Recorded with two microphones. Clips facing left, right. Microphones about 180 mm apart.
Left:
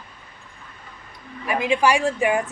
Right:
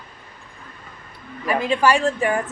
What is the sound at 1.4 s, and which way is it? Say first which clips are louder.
Speech: right 1 dB; 15° left (ahead or behind).